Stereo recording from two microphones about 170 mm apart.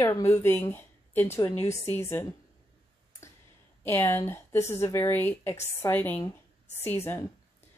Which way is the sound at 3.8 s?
15° left (ahead or behind).